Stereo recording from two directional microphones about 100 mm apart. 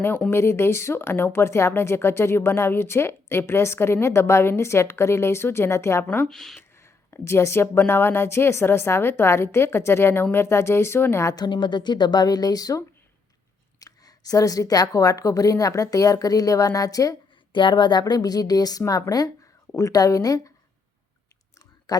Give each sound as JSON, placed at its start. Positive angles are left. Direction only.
{"t": 0.3, "sound": "speech", "side_deg": 25}
{"t": 6.1, "sound": "speech", "side_deg": 10}
{"t": 6.6, "sound": "speech", "side_deg": 25}
{"t": 11.3, "sound": "a woman's voice", "side_deg": 50}
{"t": 17.5, "sound": "a woman's voice", "side_deg": 50}
{"t": 21.9, "sound": "a man's voice", "side_deg": 40}